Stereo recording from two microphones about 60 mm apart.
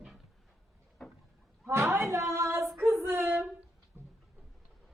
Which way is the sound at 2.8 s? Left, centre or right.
Right.